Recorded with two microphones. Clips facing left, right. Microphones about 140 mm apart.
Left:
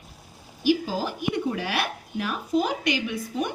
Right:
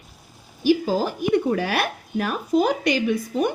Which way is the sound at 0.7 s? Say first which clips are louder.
Right 5 dB; 45° right (ahead or behind).